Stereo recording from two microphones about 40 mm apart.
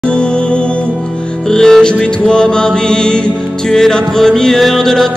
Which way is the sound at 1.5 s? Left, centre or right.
Centre.